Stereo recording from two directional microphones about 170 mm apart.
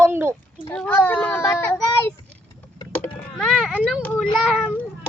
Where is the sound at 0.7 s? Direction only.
10° left (ahead or behind).